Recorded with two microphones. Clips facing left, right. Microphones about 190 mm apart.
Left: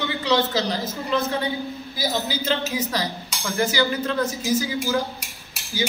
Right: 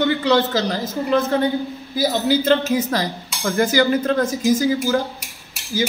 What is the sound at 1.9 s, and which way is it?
Speech, 55° right (ahead or behind).